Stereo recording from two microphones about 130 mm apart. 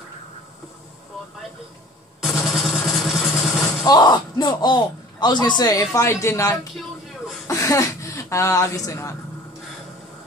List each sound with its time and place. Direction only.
2.2 s vehicle: centre (ahead or behind)
3.8 s speech: 30° left (ahead or behind)